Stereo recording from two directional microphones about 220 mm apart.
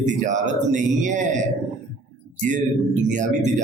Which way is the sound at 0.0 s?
35° right (ahead or behind).